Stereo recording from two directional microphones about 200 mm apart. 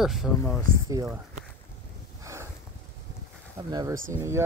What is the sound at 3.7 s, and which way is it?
Speech, 20° right (ahead or behind).